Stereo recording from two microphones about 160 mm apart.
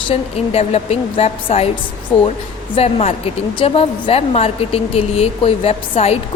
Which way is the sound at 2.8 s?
40° left (ahead or behind).